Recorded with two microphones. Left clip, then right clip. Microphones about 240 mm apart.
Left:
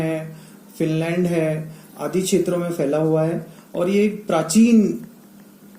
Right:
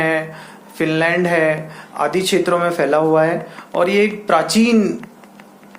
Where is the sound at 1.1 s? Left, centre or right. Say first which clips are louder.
Right 6 dB; right.